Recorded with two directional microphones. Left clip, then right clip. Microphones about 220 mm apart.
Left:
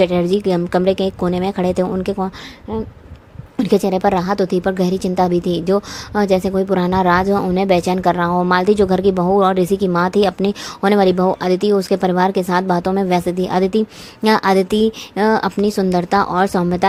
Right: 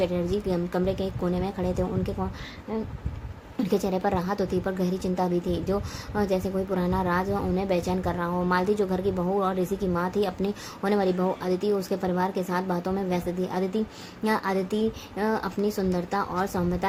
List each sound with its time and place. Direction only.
0.0 s a woman's voice: 40° left (ahead or behind)
3.6 s a woman's voice: 35° left (ahead or behind)